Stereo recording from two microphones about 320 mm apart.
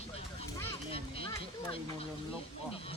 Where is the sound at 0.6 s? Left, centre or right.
Centre.